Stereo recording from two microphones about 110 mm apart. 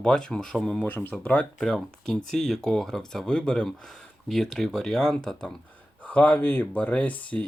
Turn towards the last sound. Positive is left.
turn(degrees=15)  # may be behind; listen again after turning